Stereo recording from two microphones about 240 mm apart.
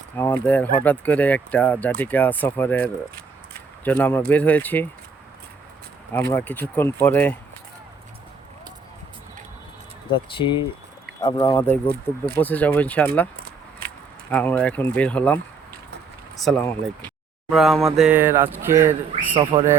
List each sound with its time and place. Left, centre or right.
0.2 s speech: centre
6.3 s speech: centre
10.1 s speech: left
13.3 s keys jangling: right
14.3 s speech: centre
16.4 s speech: centre
19.4 s speech: centre